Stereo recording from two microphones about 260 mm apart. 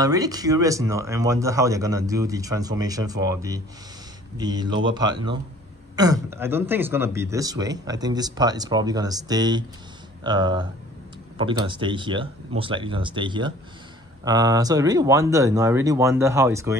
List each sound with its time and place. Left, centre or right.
0.0 s speech: centre